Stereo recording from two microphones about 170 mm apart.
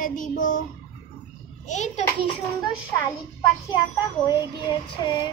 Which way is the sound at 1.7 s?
45° left (ahead or behind).